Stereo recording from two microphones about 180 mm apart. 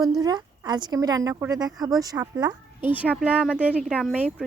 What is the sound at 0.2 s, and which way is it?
Speech, 20° right (ahead or behind).